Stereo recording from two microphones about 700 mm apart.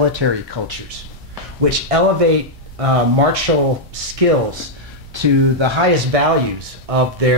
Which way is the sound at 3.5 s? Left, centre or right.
Right.